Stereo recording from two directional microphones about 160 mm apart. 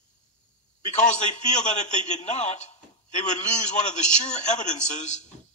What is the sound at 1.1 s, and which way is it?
A man's voice, 45° left (ahead or behind).